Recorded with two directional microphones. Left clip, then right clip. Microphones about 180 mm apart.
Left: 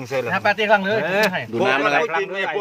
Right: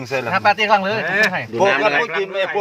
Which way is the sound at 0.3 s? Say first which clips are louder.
Right 3 dB; 35° right (ahead or behind).